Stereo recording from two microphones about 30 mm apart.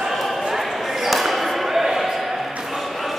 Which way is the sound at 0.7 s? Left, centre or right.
Centre.